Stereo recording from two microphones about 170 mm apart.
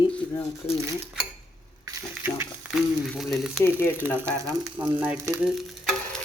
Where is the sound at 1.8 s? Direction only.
15° right (ahead or behind).